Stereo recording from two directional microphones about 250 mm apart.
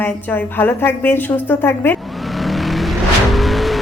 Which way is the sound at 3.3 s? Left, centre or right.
Centre.